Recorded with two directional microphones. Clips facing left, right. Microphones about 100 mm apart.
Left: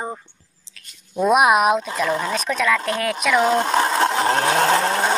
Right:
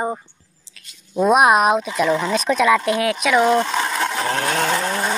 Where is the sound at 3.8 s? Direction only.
30° left (ahead or behind).